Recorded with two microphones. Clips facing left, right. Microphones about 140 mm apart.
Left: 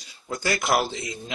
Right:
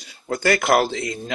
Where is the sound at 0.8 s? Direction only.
Centre (ahead or behind).